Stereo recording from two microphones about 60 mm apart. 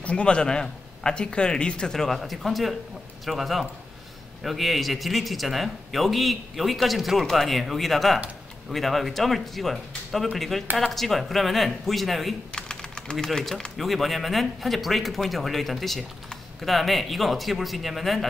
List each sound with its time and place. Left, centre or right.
0.0 s a man's voice: centre
2.0 s a man's voice: centre
12.5 s a man's voice: centre